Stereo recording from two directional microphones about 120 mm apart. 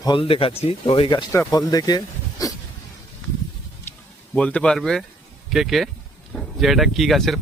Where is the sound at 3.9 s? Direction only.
20° left (ahead or behind).